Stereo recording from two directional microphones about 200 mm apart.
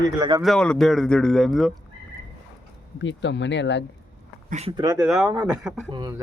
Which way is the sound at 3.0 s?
65° left (ahead or behind).